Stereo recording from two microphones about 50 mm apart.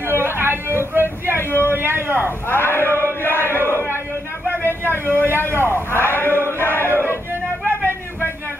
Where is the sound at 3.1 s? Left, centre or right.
Left.